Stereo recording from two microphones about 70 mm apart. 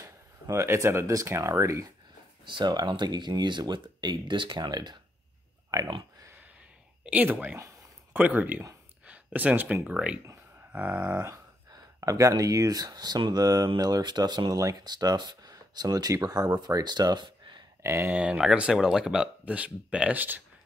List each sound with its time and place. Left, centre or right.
0.0 s speech: right
2.6 s speech: right
5.7 s pig: right
7.1 s speech: right
9.0 s a sound: right
10.7 s speech: right
12.0 s speech: right
17.8 s speech: right
18.1 s speech: centre